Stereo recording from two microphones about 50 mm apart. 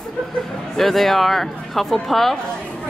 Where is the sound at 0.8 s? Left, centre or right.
Centre.